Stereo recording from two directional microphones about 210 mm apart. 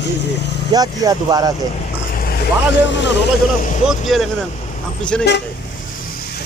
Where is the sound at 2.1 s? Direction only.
45° left (ahead or behind).